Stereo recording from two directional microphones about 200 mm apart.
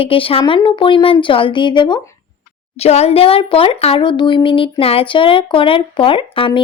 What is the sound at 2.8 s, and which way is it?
A woman's voice, 30° left (ahead or behind).